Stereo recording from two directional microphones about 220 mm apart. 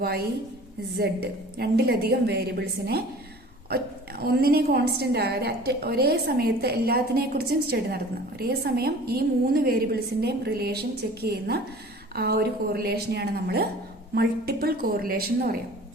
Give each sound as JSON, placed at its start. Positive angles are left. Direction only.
{"t": 0.9, "sound": "a woman's voice", "side_deg": -45}
{"t": 4.2, "sound": "a woman's voice", "side_deg": -45}